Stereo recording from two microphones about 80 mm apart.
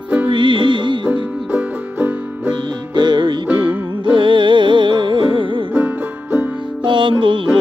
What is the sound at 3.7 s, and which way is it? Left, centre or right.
Music, right.